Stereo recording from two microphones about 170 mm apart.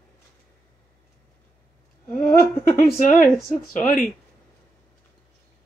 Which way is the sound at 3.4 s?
55° left (ahead or behind).